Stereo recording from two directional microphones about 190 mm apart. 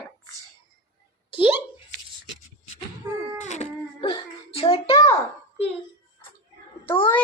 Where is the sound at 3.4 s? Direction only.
35° left (ahead or behind).